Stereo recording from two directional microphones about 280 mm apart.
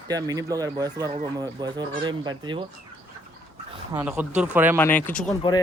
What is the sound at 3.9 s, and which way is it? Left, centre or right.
Speech, centre.